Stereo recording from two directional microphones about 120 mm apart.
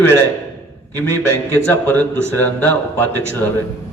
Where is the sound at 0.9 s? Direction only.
20° left (ahead or behind).